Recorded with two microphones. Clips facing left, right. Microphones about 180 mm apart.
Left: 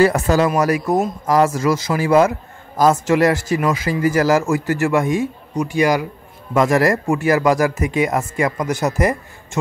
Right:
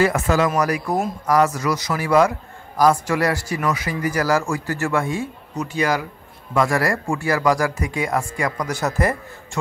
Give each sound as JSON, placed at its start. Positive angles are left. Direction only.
{"t": 0.0, "sound": "speech", "side_deg": 35}
{"t": 0.6, "sound": "speech", "side_deg": 25}